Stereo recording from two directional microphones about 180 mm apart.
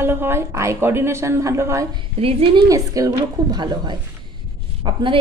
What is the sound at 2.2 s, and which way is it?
Speech, 30° right (ahead or behind).